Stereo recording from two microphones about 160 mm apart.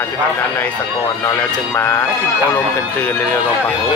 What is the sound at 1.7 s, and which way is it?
Speech, 15° left (ahead or behind).